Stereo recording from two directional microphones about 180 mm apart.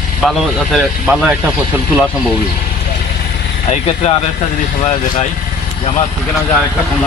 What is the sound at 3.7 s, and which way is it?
Speech, 35° left (ahead or behind).